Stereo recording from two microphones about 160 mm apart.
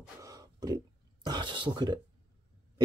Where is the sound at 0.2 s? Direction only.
25° right (ahead or behind).